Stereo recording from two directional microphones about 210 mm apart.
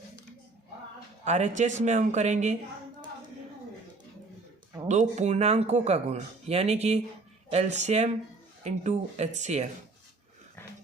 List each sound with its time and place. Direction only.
1.2 s speech: 35° right (ahead or behind)
4.9 s speech: 35° right (ahead or behind)